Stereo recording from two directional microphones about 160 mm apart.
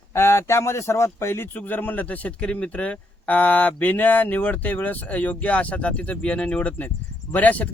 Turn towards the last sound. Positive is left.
turn(degrees=10)  # may be behind; listen again after turning